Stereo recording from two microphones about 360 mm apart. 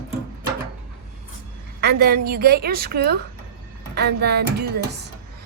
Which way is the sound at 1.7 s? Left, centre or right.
Right.